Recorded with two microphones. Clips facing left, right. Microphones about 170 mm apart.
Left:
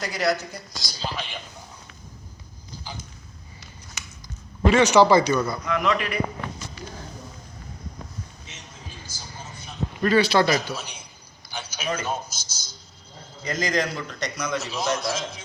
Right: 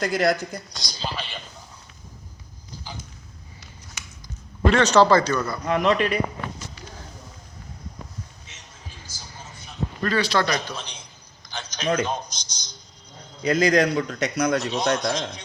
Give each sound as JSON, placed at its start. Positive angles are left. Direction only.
{"t": 0.0, "sound": "speech", "side_deg": -50}
{"t": 0.7, "sound": "speech", "side_deg": 5}
{"t": 4.6, "sound": "speech", "side_deg": 10}
{"t": 5.6, "sound": "a man's voice", "side_deg": -30}
{"t": 8.5, "sound": "a sound", "side_deg": 20}
{"t": 10.0, "sound": "a sound", "side_deg": 10}
{"t": 12.0, "sound": "speech", "side_deg": 5}
{"t": 13.4, "sound": "a man's voice", "side_deg": -65}
{"t": 14.6, "sound": "speech", "side_deg": 5}